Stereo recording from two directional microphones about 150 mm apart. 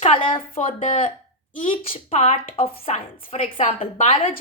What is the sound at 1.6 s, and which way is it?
A woman's voice, 35° left (ahead or behind).